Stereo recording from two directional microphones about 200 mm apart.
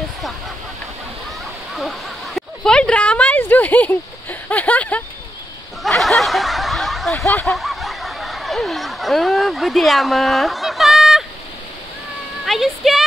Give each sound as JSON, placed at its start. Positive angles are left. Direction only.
{"t": 1.8, "sound": "a sound", "side_deg": 0}
{"t": 5.8, "sound": "snicker", "side_deg": 0}
{"t": 12.4, "sound": "speech", "side_deg": 0}